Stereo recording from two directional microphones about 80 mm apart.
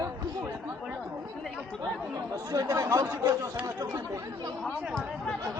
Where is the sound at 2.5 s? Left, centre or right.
Right.